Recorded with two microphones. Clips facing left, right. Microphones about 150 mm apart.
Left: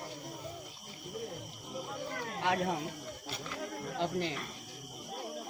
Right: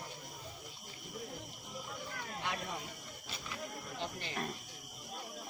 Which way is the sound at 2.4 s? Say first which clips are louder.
Left 10 dB; 70° left (ahead or behind).